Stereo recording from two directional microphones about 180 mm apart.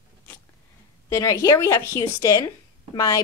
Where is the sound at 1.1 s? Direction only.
15° left (ahead or behind).